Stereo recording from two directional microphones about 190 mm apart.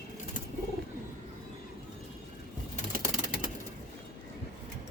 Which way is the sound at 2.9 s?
45° right (ahead or behind).